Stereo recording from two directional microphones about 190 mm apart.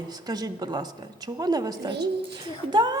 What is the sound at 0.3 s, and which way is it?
A woman's voice, 20° right (ahead or behind).